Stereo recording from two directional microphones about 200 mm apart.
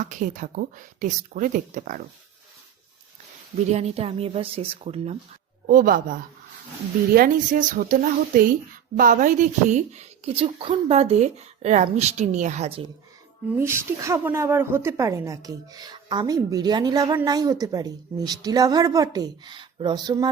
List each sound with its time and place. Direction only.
0.0 s speech: 40° right (ahead or behind)
3.7 s speech: 30° right (ahead or behind)
5.6 s speech: 45° right (ahead or behind)
13.6 s a woman's voice: 15° right (ahead or behind)